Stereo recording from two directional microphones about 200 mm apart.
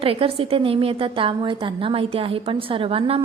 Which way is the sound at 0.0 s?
25° right (ahead or behind).